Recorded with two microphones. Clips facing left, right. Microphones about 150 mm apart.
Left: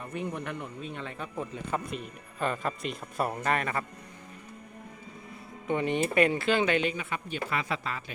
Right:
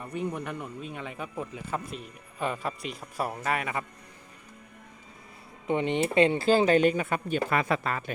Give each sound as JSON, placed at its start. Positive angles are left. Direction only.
{"t": 0.1, "sound": "speech", "side_deg": -5}
{"t": 5.6, "sound": "speech", "side_deg": -25}